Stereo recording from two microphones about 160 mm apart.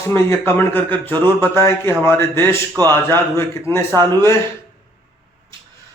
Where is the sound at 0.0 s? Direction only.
15° left (ahead or behind).